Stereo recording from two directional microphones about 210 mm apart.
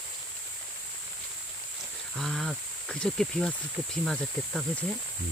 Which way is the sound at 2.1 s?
Centre (ahead or behind).